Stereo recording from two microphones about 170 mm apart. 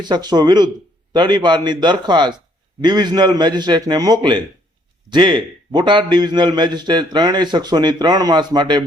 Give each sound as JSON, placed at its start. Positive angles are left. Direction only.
{"t": 0.0, "sound": "a man's voice", "side_deg": -25}